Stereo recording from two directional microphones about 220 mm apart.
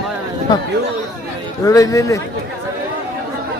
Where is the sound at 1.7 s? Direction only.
15° left (ahead or behind).